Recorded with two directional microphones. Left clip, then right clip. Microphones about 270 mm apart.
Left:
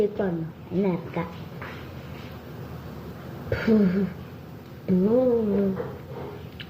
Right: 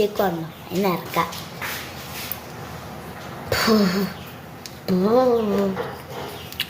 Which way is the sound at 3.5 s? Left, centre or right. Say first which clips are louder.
Right 4 dB; right.